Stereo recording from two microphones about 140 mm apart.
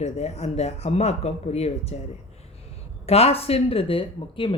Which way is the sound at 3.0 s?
45° left (ahead or behind).